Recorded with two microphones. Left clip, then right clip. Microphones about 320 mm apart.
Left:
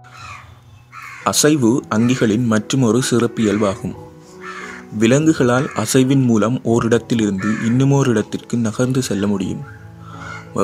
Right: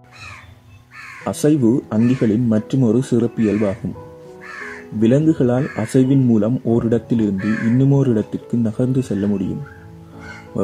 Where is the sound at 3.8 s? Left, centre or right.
Left.